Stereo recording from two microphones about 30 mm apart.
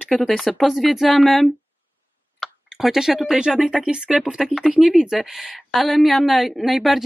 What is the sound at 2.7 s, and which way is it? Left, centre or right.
Speech, centre.